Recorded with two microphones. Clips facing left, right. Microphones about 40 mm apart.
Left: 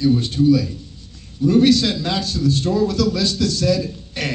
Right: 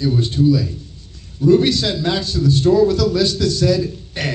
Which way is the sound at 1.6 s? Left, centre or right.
Right.